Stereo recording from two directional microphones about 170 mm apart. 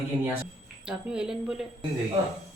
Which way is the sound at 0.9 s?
5° right (ahead or behind).